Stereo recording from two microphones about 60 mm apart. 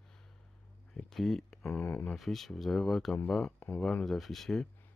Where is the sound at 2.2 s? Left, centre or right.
Centre.